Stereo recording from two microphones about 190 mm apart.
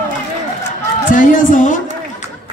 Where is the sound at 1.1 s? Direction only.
45° left (ahead or behind).